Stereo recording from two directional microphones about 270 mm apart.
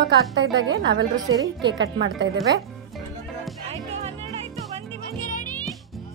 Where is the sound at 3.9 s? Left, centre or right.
Right.